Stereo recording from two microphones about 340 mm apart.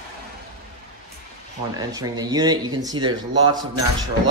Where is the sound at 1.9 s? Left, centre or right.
Centre.